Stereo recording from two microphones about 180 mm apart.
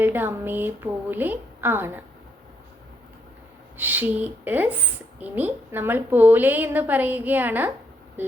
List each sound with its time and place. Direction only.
0.0 s a woman's voice: 10° right (ahead or behind)
3.8 s a woman's voice: 10° right (ahead or behind)